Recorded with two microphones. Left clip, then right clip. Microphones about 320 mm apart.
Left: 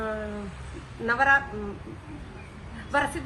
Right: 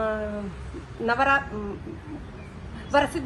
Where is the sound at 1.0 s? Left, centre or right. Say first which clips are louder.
Even; centre.